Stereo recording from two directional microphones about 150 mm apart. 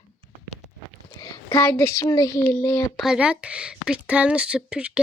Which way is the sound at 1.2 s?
20° left (ahead or behind).